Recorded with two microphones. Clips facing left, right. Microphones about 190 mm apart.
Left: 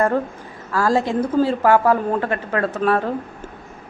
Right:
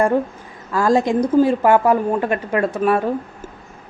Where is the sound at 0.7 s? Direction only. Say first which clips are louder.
Right 3 dB; 15° right (ahead or behind).